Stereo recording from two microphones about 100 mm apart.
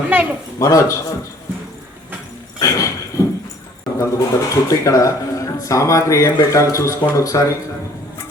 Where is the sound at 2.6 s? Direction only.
35° left (ahead or behind).